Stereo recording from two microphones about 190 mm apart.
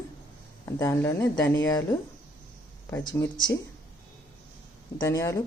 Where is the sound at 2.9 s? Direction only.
15° left (ahead or behind).